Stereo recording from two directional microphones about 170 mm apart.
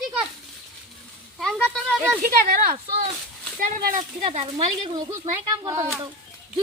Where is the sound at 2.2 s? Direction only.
55° right (ahead or behind).